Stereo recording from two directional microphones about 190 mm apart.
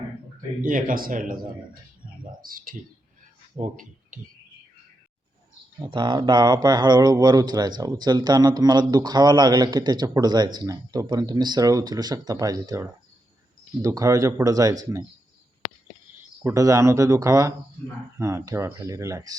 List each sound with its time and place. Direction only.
0.6 s speech: 45° right (ahead or behind)
2.4 s speech: 50° right (ahead or behind)
5.8 s speech: 25° right (ahead or behind)
16.4 s speech: 15° right (ahead or behind)